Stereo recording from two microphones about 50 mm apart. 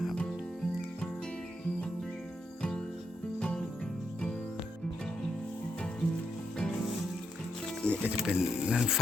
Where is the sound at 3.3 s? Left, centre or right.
Centre.